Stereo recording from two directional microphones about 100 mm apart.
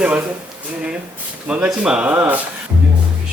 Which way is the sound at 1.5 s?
10° right (ahead or behind).